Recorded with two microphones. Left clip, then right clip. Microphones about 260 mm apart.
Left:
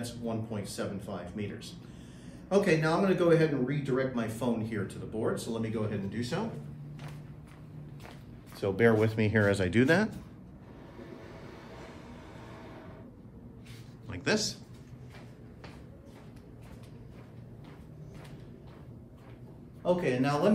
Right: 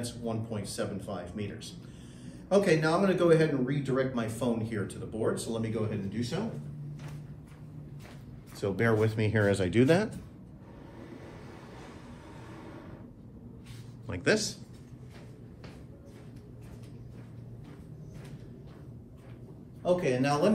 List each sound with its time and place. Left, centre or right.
0.0 s a man's voice: centre
8.5 s speech: left
14.0 s a man's voice: centre
14.3 s a man's voice: centre
19.8 s a man's voice: centre